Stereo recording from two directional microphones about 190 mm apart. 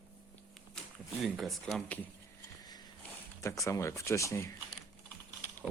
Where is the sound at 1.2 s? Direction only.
Centre (ahead or behind).